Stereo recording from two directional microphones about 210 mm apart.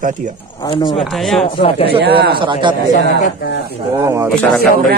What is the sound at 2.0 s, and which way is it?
Speech, 50° right (ahead or behind).